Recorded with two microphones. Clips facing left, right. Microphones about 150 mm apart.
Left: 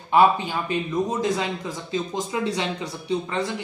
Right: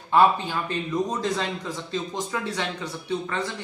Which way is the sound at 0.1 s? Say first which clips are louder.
Left 1 dB; 15° left (ahead or behind).